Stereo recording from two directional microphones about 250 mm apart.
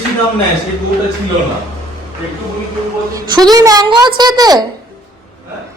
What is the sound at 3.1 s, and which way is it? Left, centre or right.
A woman's voice, centre.